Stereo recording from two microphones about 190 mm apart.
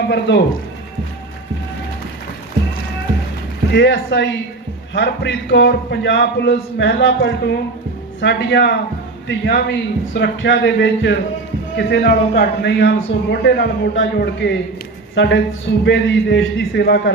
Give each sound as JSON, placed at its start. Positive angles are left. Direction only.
{"t": 0.1, "sound": "a man's voice", "side_deg": 65}
{"t": 3.7, "sound": "a man's voice", "side_deg": 65}